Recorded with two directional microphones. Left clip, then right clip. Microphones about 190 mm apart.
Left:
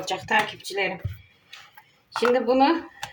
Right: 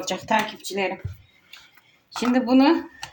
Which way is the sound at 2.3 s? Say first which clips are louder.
Right 3 dB; 30° right (ahead or behind).